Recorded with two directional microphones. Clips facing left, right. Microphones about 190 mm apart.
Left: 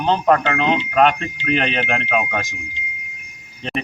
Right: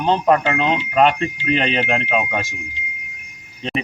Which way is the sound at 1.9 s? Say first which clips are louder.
Right 1 dB; 25° right (ahead or behind).